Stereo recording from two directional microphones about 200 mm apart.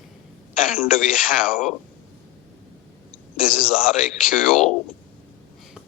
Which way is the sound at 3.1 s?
20° right (ahead or behind).